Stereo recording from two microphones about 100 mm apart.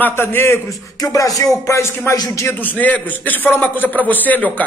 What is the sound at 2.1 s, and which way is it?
Speech, 40° left (ahead or behind).